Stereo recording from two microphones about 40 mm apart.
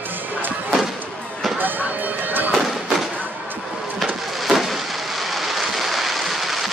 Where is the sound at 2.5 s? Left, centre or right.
Centre.